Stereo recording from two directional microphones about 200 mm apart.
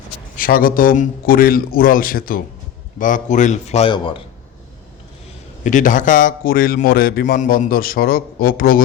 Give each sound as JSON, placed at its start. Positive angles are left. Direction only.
{"t": 0.3, "sound": "a man's voice", "side_deg": 45}
{"t": 5.6, "sound": "a man's voice", "side_deg": 40}